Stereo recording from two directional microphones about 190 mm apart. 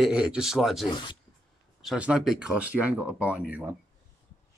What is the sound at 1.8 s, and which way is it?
Speech, 5° right (ahead or behind).